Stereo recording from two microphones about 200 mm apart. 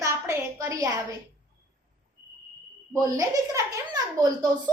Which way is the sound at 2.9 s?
15° right (ahead or behind).